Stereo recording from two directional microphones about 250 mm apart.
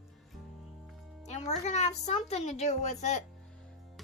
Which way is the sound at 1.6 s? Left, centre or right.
Left.